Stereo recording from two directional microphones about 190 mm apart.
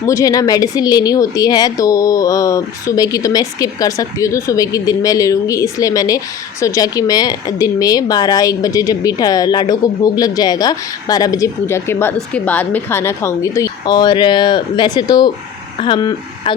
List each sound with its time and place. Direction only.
0.0 s a woman's voice: 15° left (ahead or behind)